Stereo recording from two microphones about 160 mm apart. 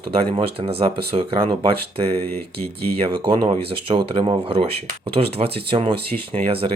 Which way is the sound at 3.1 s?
30° right (ahead or behind).